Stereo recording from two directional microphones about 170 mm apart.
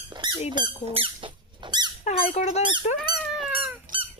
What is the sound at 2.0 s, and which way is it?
Squeak, 35° left (ahead or behind).